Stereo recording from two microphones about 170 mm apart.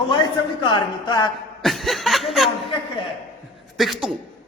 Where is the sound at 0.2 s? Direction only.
25° left (ahead or behind).